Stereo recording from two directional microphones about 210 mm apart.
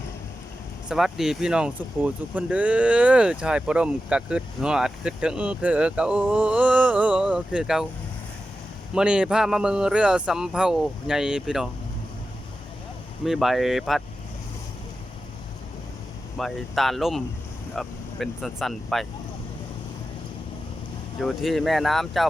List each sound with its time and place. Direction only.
0.9 s speech: centre (ahead or behind)
9.0 s speech: 5° right (ahead or behind)
13.2 s speech: centre (ahead or behind)
16.4 s speech: centre (ahead or behind)
21.2 s speech: centre (ahead or behind)